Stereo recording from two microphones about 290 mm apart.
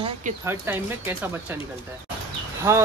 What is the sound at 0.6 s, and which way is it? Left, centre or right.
Speech, centre.